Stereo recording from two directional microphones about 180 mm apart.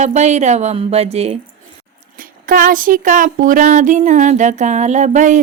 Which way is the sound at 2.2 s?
50° right (ahead or behind).